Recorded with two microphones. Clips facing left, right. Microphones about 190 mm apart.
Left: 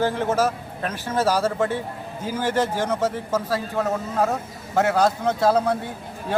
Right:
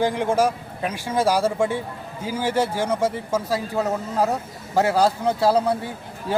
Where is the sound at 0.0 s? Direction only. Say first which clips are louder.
Right 1 dB; 15° right (ahead or behind).